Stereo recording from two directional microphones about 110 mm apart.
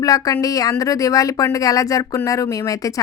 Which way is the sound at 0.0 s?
35° left (ahead or behind).